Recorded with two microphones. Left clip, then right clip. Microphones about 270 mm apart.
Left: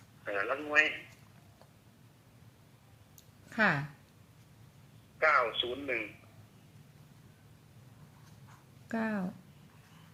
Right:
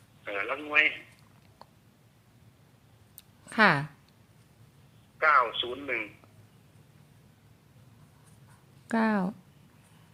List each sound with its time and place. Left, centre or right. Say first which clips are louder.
0.3 s a sound: right 1 dB; centre
3.5 s speech: right 7 dB; right
5.2 s radio: right 4 dB; centre
8.9 s speech: right 8 dB; right